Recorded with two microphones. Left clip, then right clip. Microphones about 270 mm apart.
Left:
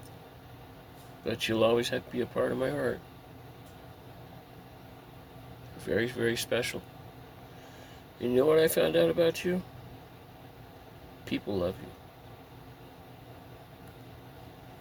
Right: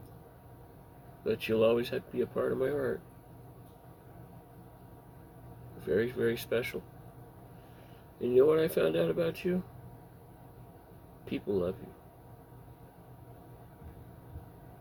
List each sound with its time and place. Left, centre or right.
1.2 s speech: left
5.8 s speech: left
8.2 s speech: left
11.3 s speech: left